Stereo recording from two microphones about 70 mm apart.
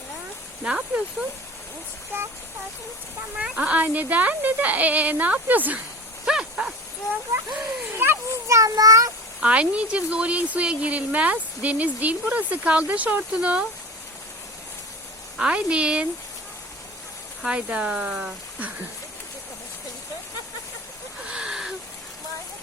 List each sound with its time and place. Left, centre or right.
0.6 s speech: centre
3.3 s speech: centre
6.2 s a sound: centre
7.9 s children playing: right
8.4 s a child's voice: right
9.4 s speech: centre
15.4 s speech: centre
17.4 s speech: centre
21.2 s a sound: centre